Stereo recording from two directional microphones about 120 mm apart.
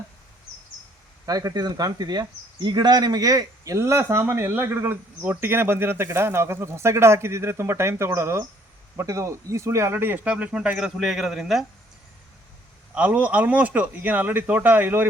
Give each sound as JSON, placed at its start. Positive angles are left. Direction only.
{"t": 1.2, "sound": "speech", "side_deg": -30}
{"t": 12.9, "sound": "speech", "side_deg": -10}